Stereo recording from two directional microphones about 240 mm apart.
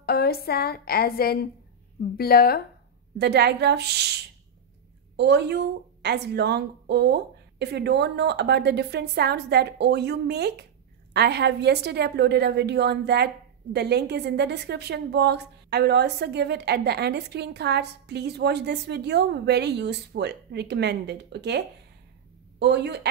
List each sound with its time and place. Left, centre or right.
0.0 s a woman's voice: left
3.2 s a woman's voice: right